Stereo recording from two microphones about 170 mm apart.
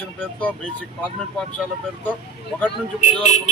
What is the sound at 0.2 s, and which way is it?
Speech, 10° left (ahead or behind).